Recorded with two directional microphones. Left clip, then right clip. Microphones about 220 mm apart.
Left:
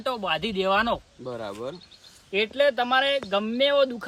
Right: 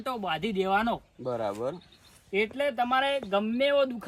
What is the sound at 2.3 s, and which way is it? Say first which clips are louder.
Speech: left 5 dB; 10° left (ahead or behind).